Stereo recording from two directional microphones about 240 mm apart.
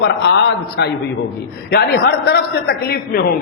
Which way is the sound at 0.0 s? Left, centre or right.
Left.